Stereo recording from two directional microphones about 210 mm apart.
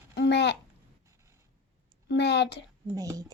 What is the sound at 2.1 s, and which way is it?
Speech, 55° left (ahead or behind).